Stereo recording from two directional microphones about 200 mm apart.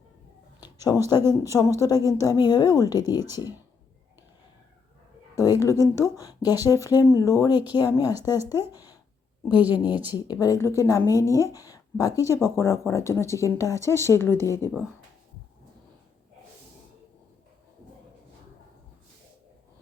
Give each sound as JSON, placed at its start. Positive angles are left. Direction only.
{"t": 0.6, "sound": "a sound", "side_deg": 20}
{"t": 1.3, "sound": "speech", "side_deg": 15}
{"t": 5.4, "sound": "speech", "side_deg": 15}
{"t": 9.6, "sound": "a woman's voice", "side_deg": -10}
{"t": 10.4, "sound": "speech", "side_deg": 15}
{"t": 14.7, "sound": "speech", "side_deg": -5}